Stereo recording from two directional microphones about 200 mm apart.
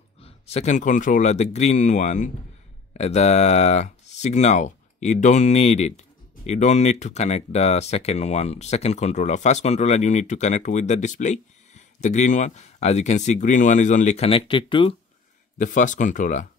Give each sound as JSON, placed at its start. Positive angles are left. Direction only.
{"t": 0.2, "sound": "speech", "side_deg": 30}
{"t": 15.5, "sound": "speech", "side_deg": 40}